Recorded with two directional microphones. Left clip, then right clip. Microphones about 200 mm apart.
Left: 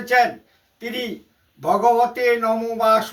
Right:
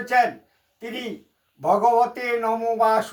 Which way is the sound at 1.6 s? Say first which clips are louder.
Left 1 dB; 20° right (ahead or behind).